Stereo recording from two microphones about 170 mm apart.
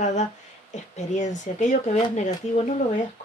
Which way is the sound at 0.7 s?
45° left (ahead or behind).